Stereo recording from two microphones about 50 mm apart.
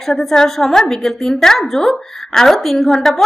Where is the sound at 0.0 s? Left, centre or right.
Centre.